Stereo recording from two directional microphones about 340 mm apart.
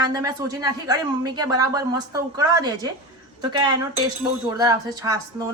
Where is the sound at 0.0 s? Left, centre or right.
Centre.